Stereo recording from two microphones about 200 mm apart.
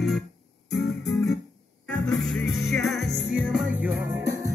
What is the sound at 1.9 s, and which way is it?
Music, centre (ahead or behind).